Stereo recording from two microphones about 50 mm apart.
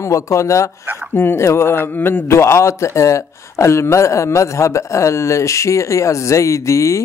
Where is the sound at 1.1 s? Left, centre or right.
Left.